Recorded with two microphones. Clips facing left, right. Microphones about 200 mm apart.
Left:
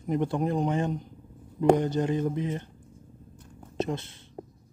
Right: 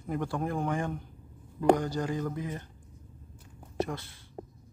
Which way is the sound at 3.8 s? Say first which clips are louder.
Left 3 dB; 20° left (ahead or behind).